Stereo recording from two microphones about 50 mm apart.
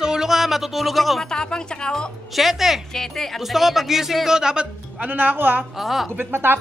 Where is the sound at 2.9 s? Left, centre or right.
Centre.